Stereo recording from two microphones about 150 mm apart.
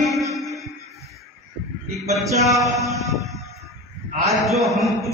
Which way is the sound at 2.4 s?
Centre (ahead or behind).